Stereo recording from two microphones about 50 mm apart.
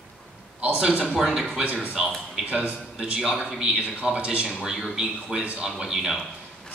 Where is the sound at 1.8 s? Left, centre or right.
Centre.